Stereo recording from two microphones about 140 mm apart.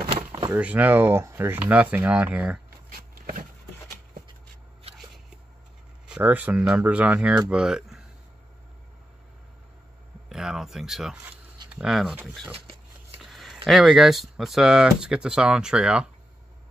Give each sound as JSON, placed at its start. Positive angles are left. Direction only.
{"t": 0.5, "sound": "speech", "side_deg": -10}
{"t": 6.0, "sound": "speech", "side_deg": -10}
{"t": 10.3, "sound": "speech", "side_deg": -5}
{"t": 12.5, "sound": "a sound", "side_deg": -45}
{"t": 13.2, "sound": "a sound", "side_deg": 0}
{"t": 13.7, "sound": "speech", "side_deg": 0}